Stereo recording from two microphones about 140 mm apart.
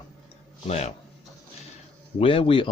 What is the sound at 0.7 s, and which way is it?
Speech, 50° left (ahead or behind).